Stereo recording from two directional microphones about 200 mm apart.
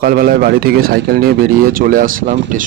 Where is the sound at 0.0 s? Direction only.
45° right (ahead or behind).